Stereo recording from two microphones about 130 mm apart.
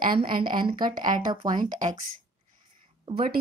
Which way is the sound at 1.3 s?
35° right (ahead or behind).